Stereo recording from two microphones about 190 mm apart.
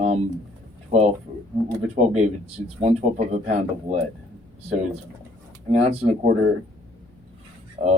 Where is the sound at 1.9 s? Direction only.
35° right (ahead or behind).